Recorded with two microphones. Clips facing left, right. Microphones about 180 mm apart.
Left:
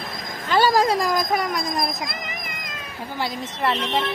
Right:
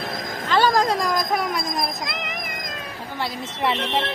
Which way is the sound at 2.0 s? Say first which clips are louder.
Right 2 dB; 75° right (ahead or behind).